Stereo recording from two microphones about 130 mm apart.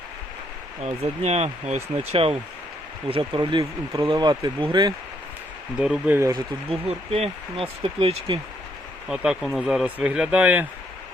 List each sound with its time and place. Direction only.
0.8 s speech: 55° right (ahead or behind)
3.1 s speech: 40° right (ahead or behind)
5.8 s speech: 5° right (ahead or behind)
6.1 s speech: 25° right (ahead or behind)
6.7 s speech: 50° right (ahead or behind)
9.0 s speech: 5° right (ahead or behind)